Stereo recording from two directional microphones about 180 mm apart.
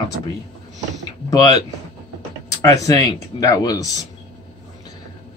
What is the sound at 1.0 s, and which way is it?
Speech, 20° left (ahead or behind).